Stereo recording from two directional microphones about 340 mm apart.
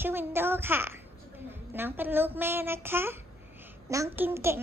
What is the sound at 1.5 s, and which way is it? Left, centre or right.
A child's voice, centre.